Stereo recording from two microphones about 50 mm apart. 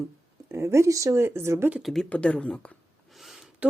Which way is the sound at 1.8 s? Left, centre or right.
Centre.